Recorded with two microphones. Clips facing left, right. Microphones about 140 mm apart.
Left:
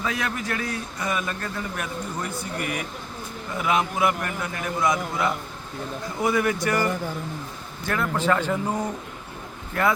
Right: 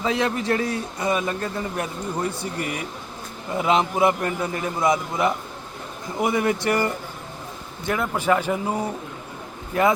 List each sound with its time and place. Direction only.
0.0 s a man's voice: 25° right (ahead or behind)
7.9 s a man's voice: 15° right (ahead or behind)